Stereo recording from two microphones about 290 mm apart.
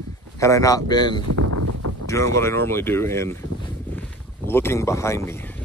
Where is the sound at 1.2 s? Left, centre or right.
Right.